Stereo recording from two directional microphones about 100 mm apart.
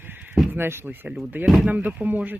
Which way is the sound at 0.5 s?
20° right (ahead or behind).